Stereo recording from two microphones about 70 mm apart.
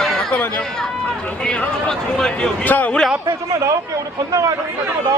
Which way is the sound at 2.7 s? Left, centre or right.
Left.